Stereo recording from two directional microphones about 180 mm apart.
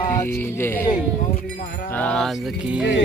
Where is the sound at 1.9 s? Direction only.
10° left (ahead or behind).